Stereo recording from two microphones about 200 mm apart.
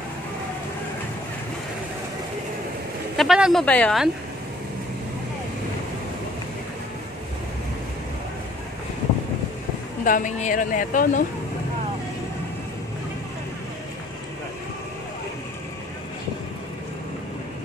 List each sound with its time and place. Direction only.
3.2 s speech: centre (ahead or behind)
10.0 s speech: 40° left (ahead or behind)